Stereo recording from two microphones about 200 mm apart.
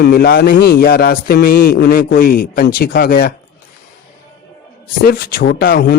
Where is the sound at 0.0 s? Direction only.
55° left (ahead or behind).